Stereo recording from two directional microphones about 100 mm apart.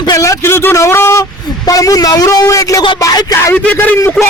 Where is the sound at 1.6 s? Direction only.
35° left (ahead or behind).